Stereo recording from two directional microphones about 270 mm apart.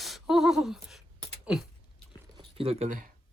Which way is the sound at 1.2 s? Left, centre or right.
Centre.